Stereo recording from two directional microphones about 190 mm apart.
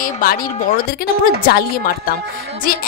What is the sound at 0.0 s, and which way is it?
Speech, 50° left (ahead or behind).